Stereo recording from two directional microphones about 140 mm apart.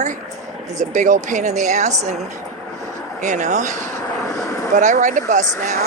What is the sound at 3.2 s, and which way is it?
Speech, 60° right (ahead or behind).